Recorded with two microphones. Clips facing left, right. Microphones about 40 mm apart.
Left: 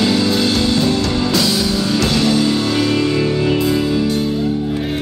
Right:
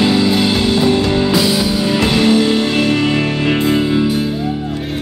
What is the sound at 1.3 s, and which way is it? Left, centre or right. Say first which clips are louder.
Music: right 2 dB; centre.